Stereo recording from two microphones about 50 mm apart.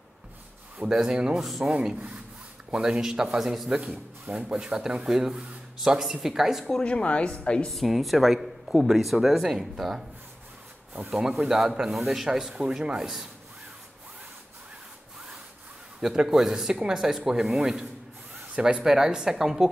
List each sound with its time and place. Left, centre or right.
0.8 s speech: centre
1.4 s speech: centre
1.7 s speech: right
2.7 s speech: centre
4.3 s speech: right
4.6 s speech: centre
6.8 s a woman's voice: left
7.7 s speech: centre
11.1 s speech: centre
16.2 s speech: centre